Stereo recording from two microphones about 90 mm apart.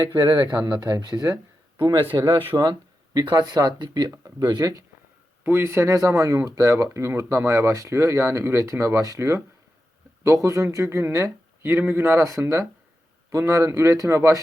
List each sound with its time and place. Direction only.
0.0 s speech: 55° right (ahead or behind)
0.8 s speech: 45° right (ahead or behind)
1.8 s speech: 55° right (ahead or behind)
4.1 s speech: 40° right (ahead or behind)
5.4 s speech: 25° right (ahead or behind)